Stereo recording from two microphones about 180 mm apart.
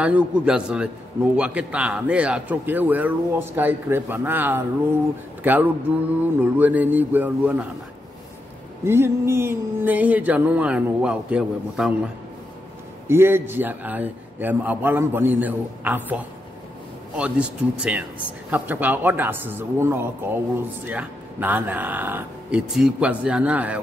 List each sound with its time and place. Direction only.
0.0 s a man's voice: 5° right (ahead or behind)
8.8 s a man's voice: 15° right (ahead or behind)
13.1 s a man's voice: 10° right (ahead or behind)